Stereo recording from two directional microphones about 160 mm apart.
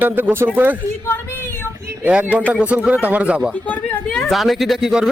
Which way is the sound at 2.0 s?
10° right (ahead or behind).